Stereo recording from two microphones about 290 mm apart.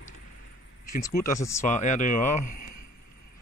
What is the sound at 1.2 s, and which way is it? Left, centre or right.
Speech, centre.